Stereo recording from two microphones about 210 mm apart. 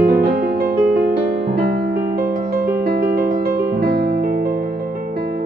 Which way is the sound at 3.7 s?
50° right (ahead or behind).